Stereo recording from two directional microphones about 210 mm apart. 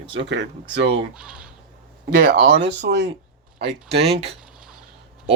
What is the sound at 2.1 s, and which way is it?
Speech, 40° right (ahead or behind).